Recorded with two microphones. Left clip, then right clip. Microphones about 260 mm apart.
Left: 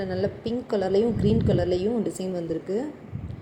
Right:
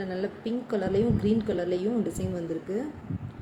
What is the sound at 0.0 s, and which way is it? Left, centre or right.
A woman's voice, centre.